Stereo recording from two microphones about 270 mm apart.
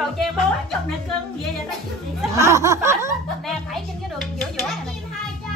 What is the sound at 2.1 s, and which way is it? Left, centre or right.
Speech, centre.